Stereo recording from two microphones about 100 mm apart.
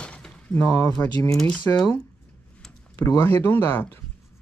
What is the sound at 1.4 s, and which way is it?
Speech, 5° left (ahead or behind).